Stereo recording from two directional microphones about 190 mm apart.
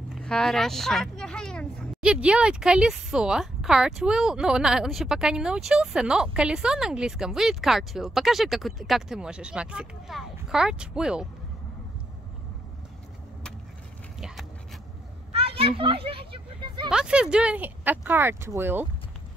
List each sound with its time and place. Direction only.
0.1 s vehicle: 5° left (ahead or behind)
2.0 s speech: 5° right (ahead or behind)
15.3 s a sound: 30° right (ahead or behind)
16.9 s speech: 5° right (ahead or behind)